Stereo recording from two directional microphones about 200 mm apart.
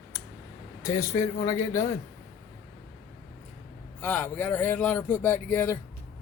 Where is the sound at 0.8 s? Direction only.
15° left (ahead or behind).